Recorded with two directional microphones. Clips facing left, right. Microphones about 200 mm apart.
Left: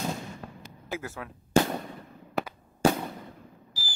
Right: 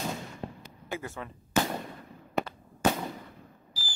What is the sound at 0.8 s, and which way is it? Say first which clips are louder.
Speech: left 1 dB; centre (ahead or behind).